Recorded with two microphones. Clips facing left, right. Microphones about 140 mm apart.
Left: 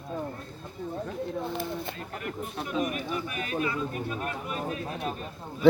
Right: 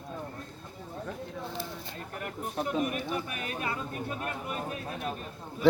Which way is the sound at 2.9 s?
45° right (ahead or behind).